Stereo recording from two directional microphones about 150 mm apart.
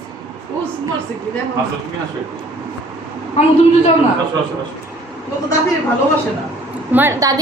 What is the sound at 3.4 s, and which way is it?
Speech, 50° left (ahead or behind).